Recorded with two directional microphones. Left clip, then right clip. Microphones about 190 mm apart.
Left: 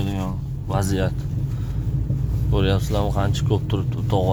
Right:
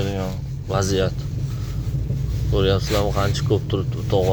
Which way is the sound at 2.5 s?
20° left (ahead or behind).